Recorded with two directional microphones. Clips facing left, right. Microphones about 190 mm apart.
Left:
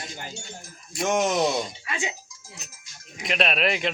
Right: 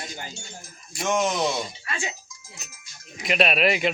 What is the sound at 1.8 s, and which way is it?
Speech, 15° left (ahead or behind).